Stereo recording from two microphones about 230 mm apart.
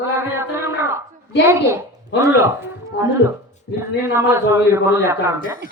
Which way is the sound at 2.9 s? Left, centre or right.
Left.